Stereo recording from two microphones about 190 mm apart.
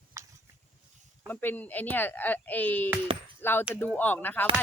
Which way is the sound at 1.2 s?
10° left (ahead or behind).